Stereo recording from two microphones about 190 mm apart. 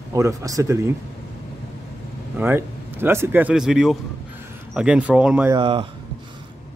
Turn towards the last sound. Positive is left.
turn(degrees=-30)  # may be behind; listen again after turning